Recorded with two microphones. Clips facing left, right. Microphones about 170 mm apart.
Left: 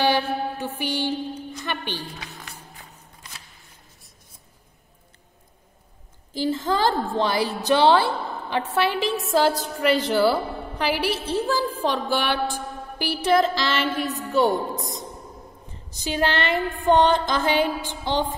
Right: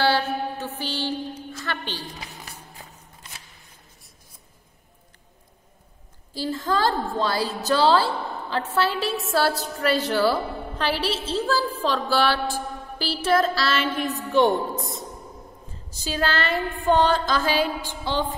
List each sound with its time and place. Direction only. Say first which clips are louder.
0.0 s mantra: left 1 dB; 15° left (ahead or behind)
6.3 s a woman's voice: left 2 dB; 20° left (ahead or behind)
12.5 s a sound: right 1 dB; 15° left (ahead or behind)
14.0 s a woman's voice: right 2 dB; centre (ahead or behind)
14.8 s a woman's voice: even; 15° left (ahead or behind)